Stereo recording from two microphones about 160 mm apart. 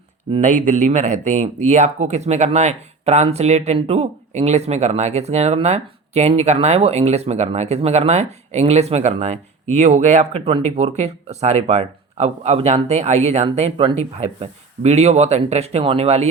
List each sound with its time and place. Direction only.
0.4 s speech: 50° right (ahead or behind)